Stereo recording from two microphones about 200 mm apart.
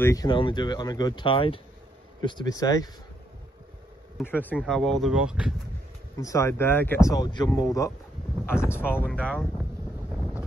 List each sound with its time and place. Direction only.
0.0 s speech: 15° left (ahead or behind)
4.3 s speech: 10° left (ahead or behind)
6.1 s speech: 15° left (ahead or behind)